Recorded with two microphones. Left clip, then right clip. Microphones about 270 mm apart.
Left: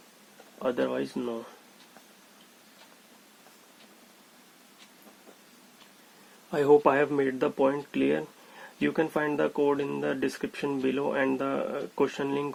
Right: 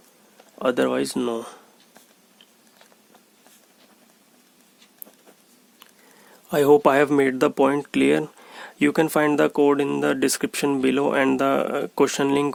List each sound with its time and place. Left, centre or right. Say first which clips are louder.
0.6 s speech: right 7 dB; right
6.5 s speech: right 5 dB; right